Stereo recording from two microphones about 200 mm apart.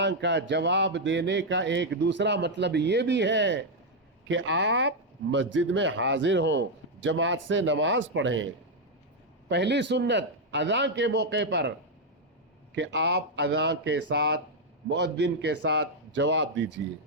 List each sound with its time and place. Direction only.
0.0 s speech: 60° right (ahead or behind)
9.5 s speech: 60° right (ahead or behind)
12.7 s speech: 60° right (ahead or behind)